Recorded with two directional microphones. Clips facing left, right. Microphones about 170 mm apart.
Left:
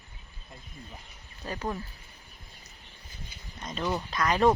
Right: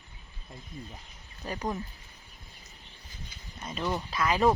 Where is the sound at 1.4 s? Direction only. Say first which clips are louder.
Even; 15° right (ahead or behind).